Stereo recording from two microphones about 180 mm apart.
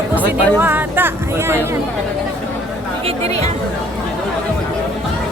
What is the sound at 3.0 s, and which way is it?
Speech, 35° right (ahead or behind).